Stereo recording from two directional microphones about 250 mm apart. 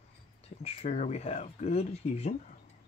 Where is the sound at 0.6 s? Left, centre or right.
Left.